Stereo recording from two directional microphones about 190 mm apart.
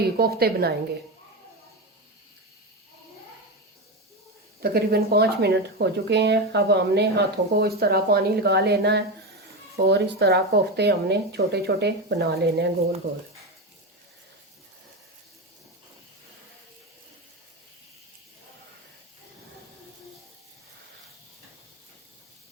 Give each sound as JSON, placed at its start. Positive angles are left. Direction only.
{"t": 0.2, "sound": "speech", "side_deg": -55}
{"t": 4.6, "sound": "speech", "side_deg": -55}